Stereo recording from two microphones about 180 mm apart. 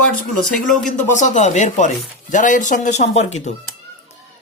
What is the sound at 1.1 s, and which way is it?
A woman's voice, 40° left (ahead or behind).